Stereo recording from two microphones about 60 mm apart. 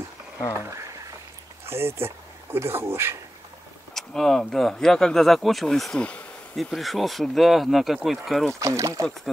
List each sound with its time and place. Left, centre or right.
0.7 s a sound: right
1.7 s speech: right
3.9 s speech: centre
5.9 s bee: left
6.5 s speech: centre
8.5 s speech: right